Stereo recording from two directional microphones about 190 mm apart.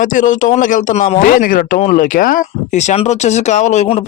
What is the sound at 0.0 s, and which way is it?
Speech, 45° left (ahead or behind).